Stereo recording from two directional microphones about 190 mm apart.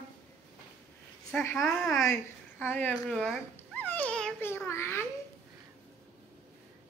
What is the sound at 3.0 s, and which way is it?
Babbling, centre (ahead or behind).